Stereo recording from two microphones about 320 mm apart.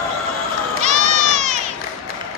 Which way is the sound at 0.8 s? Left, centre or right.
Right.